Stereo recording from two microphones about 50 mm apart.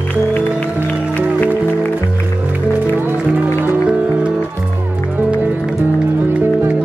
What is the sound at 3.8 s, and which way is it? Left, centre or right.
Music, right.